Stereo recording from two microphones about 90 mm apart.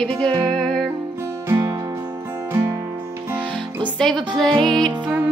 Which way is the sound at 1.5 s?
35° right (ahead or behind).